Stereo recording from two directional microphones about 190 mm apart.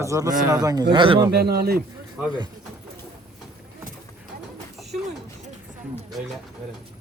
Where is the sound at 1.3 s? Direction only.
55° right (ahead or behind).